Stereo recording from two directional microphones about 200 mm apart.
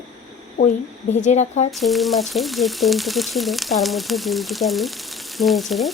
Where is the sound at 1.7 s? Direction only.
Centre (ahead or behind).